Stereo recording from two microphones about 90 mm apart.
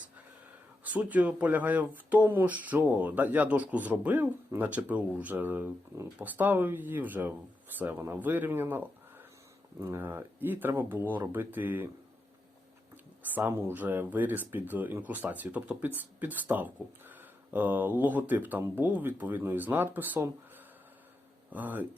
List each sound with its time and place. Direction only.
0.9 s speech: 15° right (ahead or behind)
13.3 s speech: 25° right (ahead or behind)
21.5 s speech: 20° right (ahead or behind)